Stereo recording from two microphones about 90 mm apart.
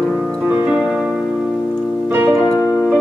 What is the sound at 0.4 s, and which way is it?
Music, 20° right (ahead or behind).